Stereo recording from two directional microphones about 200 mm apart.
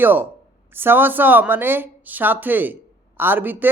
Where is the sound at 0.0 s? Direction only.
10° right (ahead or behind).